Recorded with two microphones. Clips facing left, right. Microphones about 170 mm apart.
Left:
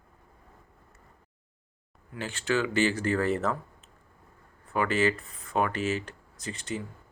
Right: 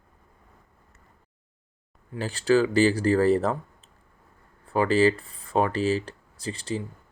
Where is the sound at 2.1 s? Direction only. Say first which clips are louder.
Right 7 dB; 35° right (ahead or behind).